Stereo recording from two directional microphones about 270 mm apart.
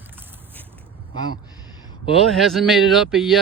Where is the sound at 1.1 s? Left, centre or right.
Right.